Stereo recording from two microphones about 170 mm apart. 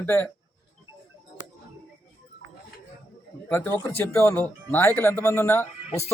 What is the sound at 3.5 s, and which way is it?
Speech, 10° left (ahead or behind).